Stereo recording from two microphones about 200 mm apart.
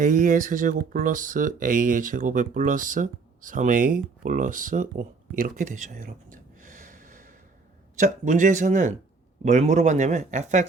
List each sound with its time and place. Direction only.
0.0 s speech: 40° right (ahead or behind)